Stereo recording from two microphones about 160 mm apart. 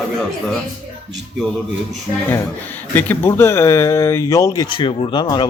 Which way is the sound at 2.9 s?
10° left (ahead or behind).